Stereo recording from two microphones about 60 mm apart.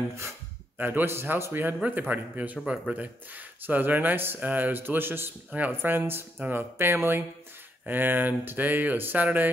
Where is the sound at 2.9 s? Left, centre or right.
Right.